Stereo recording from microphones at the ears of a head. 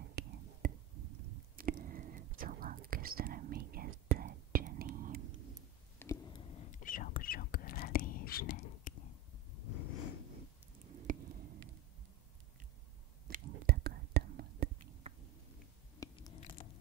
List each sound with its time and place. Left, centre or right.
0.0 s whispering: right
6.1 s whispering: left
9.6 s a sound: left
10.8 s squish: right
13.3 s whispering: right
16.0 s biting: left